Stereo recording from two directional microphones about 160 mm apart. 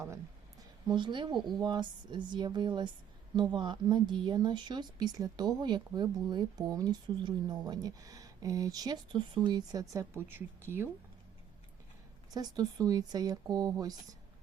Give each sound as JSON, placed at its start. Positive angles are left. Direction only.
{"t": 0.9, "sound": "speech", "side_deg": -30}
{"t": 12.3, "sound": "speech", "side_deg": -25}